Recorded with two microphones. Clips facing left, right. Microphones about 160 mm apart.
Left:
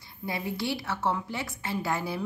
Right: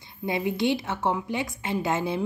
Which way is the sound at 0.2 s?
20° right (ahead or behind).